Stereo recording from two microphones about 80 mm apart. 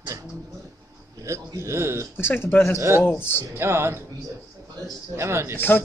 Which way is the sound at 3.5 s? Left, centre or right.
Right.